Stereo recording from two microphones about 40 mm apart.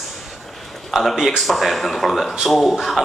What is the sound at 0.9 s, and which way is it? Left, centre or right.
Speech, centre.